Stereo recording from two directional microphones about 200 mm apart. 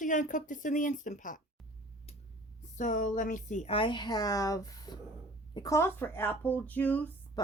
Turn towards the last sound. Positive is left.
turn(degrees=20)  # may be behind; listen again after turning